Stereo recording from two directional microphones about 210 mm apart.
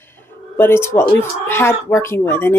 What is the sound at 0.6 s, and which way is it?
Speech, 10° left (ahead or behind).